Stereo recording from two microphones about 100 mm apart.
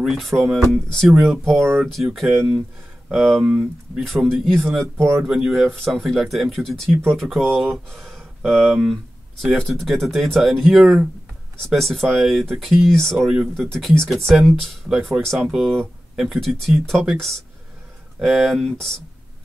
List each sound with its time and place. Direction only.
0.0 s speech: centre (ahead or behind)
4.9 s speech: 25° right (ahead or behind)
5.3 s speech: 5° right (ahead or behind)